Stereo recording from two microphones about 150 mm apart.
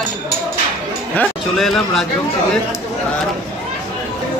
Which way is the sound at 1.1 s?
5° left (ahead or behind).